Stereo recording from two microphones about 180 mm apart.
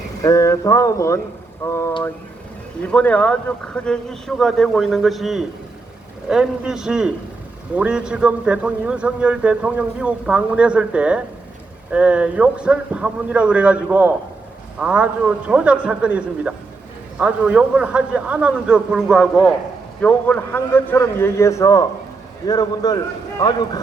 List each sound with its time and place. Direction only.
0.2 s a man's voice: 20° left (ahead or behind)